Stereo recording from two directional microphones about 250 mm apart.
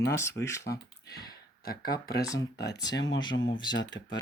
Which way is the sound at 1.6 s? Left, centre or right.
Left.